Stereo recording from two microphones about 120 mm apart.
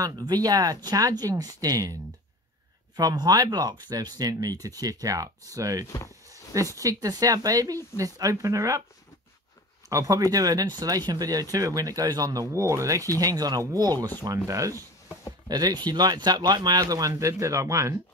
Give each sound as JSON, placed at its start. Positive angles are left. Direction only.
{"t": 0.0, "sound": "speech", "side_deg": -35}
{"t": 3.0, "sound": "speech", "side_deg": -30}
{"t": 5.9, "sound": "speech", "side_deg": 25}
{"t": 6.2, "sound": "speech", "side_deg": -25}
{"t": 9.8, "sound": "speech", "side_deg": -25}